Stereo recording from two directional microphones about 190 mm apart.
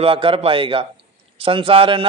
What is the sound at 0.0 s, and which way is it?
A man's voice, 30° right (ahead or behind).